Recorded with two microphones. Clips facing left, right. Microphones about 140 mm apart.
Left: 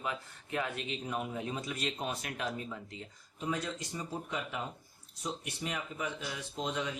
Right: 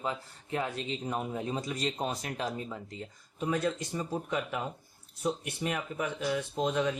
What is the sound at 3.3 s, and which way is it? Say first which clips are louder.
Speech: right 6 dB; 55° right (ahead or behind).